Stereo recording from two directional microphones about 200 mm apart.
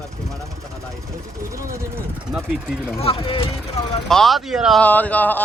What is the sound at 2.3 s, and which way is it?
Speech, centre (ahead or behind).